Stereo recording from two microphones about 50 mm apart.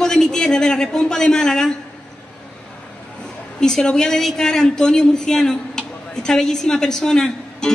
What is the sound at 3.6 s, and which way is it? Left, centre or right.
A woman's voice, centre.